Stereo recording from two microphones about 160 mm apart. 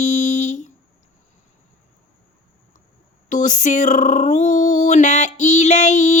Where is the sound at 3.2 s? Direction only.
50° left (ahead or behind).